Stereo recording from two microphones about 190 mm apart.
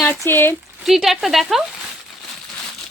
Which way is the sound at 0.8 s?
Centre (ahead or behind).